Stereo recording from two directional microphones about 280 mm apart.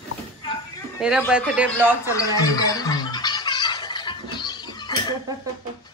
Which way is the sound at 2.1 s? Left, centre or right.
Centre.